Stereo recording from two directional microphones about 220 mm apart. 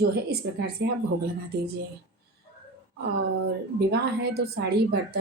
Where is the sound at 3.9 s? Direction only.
45° right (ahead or behind).